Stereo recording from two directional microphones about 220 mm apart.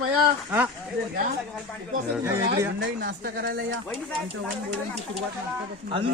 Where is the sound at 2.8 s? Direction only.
50° right (ahead or behind).